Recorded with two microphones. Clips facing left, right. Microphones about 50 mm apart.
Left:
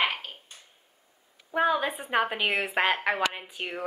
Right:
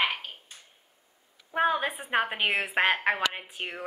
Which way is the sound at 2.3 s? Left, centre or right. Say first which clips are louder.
Even; centre.